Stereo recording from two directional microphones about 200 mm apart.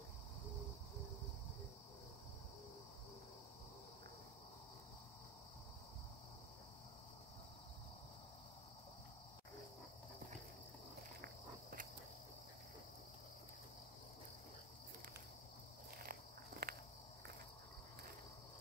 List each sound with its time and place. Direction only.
16.0 s walk: 50° right (ahead or behind)